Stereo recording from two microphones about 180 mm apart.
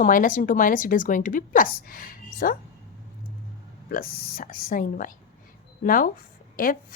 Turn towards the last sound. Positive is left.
turn(degrees=50)  # may be behind; listen again after turning